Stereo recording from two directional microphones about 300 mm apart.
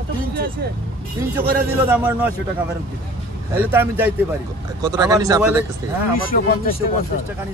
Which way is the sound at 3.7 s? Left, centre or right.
Centre.